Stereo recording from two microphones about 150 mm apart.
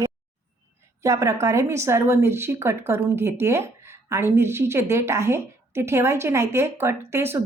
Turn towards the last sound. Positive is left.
turn(degrees=-15)  # may be behind; listen again after turning